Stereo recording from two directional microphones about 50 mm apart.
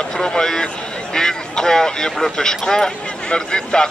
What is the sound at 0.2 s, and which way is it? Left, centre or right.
A man's voice, centre.